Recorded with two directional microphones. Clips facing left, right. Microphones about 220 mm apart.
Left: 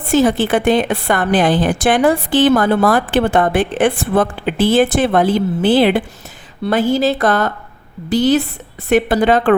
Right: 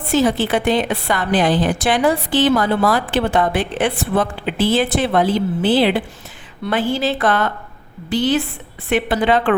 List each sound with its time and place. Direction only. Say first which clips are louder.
0.1 s a woman's voice: left 3 dB; 50° left (ahead or behind)